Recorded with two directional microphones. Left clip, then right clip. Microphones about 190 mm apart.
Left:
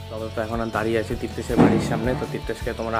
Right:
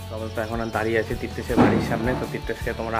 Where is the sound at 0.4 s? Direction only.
15° left (ahead or behind).